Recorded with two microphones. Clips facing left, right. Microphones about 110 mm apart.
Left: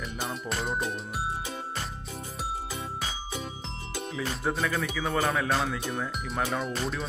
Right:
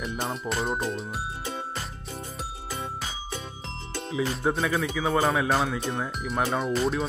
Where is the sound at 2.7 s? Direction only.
5° left (ahead or behind).